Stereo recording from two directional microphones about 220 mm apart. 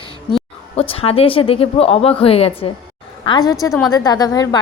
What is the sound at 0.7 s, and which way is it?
A woman's voice, 25° left (ahead or behind).